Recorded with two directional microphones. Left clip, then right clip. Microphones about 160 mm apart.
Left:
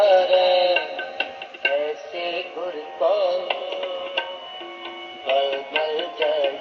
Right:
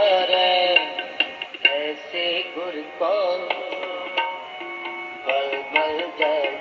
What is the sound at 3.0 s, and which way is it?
Music, 15° right (ahead or behind).